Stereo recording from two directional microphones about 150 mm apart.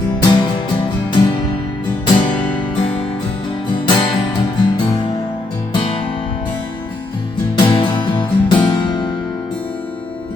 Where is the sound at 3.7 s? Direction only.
30° left (ahead or behind).